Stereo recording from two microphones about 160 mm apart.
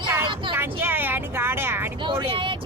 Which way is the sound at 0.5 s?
15° right (ahead or behind).